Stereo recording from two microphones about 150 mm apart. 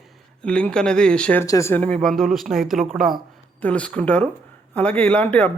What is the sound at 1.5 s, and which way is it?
Speech, 20° left (ahead or behind).